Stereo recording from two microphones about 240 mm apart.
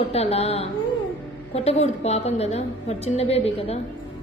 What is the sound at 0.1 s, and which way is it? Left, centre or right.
A woman's voice, left.